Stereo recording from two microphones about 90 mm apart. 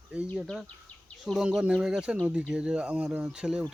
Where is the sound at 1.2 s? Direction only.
5° right (ahead or behind).